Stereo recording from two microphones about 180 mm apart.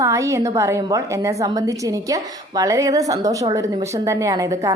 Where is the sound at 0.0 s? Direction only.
15° right (ahead or behind).